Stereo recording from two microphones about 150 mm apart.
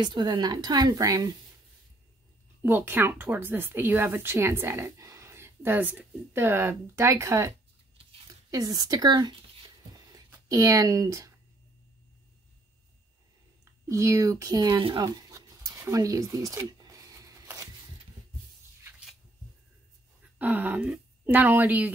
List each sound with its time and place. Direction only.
0.0 s a woman's voice: 30° right (ahead or behind)
2.6 s a woman's voice: 15° right (ahead or behind)
13.8 s a sound: 20° right (ahead or behind)
20.3 s speech: 10° right (ahead or behind)